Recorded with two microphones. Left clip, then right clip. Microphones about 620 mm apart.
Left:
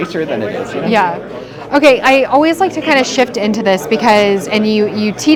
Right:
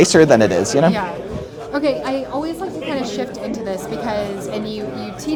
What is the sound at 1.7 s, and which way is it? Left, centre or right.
Speech, left.